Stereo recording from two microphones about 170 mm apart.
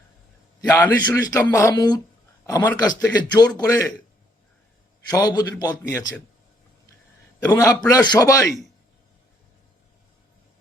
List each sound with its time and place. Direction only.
0.7 s a man's voice: 10° left (ahead or behind)
1.2 s a man's voice: 20° left (ahead or behind)
5.1 s a man's voice: 25° left (ahead or behind)
7.5 s a man's voice: 25° left (ahead or behind)